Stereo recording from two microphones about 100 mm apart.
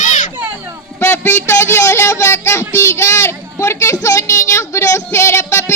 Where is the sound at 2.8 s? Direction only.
30° left (ahead or behind).